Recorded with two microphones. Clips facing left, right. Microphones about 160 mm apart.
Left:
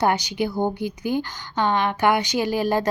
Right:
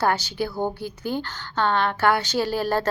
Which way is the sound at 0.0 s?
15° left (ahead or behind).